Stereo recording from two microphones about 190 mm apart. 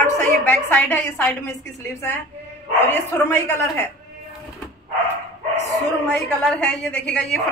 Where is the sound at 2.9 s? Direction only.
15° left (ahead or behind).